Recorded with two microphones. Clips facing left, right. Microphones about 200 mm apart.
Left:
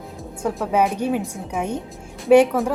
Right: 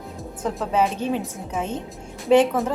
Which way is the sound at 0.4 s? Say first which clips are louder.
Left 2 dB; 10° left (ahead or behind).